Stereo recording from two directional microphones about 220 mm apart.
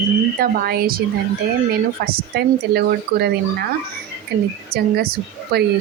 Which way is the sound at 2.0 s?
45° right (ahead or behind).